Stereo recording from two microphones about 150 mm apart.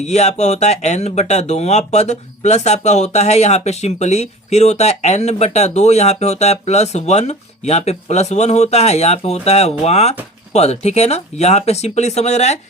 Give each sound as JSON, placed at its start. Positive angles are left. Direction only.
{"t": 0.0, "sound": "speech", "side_deg": 50}